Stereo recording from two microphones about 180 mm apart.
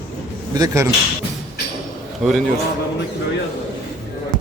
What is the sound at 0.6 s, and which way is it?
Speech, 20° right (ahead or behind).